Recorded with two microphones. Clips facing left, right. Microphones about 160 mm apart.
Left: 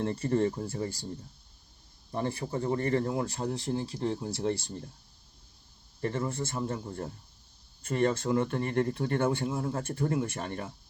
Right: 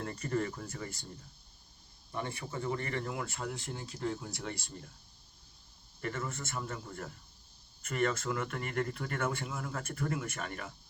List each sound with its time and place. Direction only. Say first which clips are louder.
0.0 s speech: left 7 dB; 25° left (ahead or behind)
2.1 s speech: left 7 dB; 35° left (ahead or behind)
6.0 s speech: left 7 dB; 30° left (ahead or behind)